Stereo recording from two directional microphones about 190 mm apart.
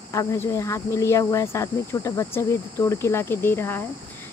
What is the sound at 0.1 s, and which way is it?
Speech, 15° left (ahead or behind).